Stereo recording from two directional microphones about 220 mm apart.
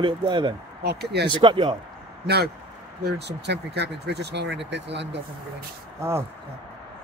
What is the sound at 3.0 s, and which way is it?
Speech, 50° right (ahead or behind).